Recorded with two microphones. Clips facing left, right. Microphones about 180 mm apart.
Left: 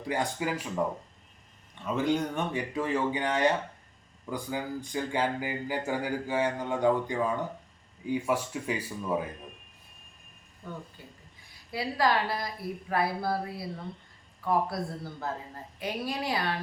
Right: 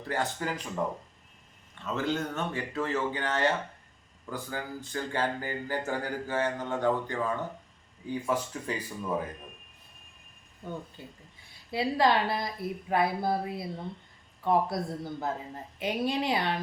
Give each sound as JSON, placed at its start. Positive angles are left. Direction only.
{"t": 0.0, "sound": "speech", "side_deg": 15}
{"t": 1.8, "sound": "speech", "side_deg": 15}
{"t": 11.0, "sound": "a woman's voice", "side_deg": -25}